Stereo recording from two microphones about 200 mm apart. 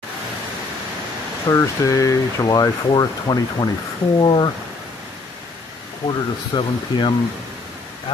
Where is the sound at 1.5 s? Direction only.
15° left (ahead or behind).